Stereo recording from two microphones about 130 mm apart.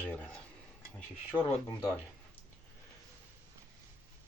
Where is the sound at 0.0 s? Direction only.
15° left (ahead or behind).